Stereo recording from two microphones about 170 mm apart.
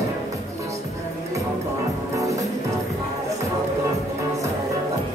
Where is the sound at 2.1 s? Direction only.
20° right (ahead or behind).